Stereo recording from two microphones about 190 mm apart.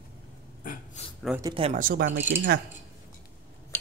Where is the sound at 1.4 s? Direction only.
25° right (ahead or behind).